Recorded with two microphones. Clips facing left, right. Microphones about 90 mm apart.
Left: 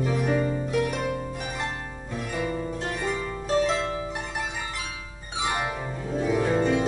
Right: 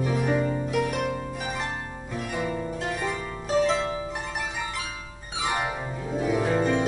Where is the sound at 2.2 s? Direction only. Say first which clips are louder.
Even; 5° right (ahead or behind).